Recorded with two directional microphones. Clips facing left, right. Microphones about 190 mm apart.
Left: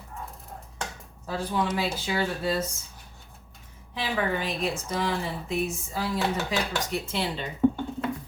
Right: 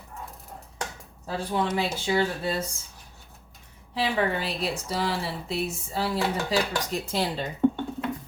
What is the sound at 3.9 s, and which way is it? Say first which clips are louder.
A woman's voice: right 2 dB; 35° right (ahead or behind).